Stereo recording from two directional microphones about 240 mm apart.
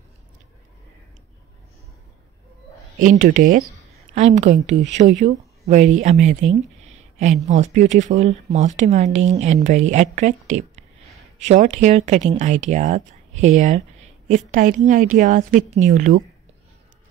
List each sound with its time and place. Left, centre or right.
3.0 s a woman's voice: right
6.5 s a sound: right
7.4 s a woman's voice: right